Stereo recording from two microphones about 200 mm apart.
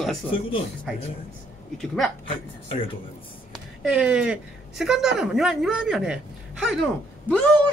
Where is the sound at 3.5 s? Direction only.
5° right (ahead or behind).